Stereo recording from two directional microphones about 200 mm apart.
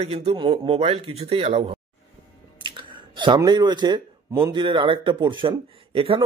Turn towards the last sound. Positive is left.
turn(degrees=-25)  # may be behind; listen again after turning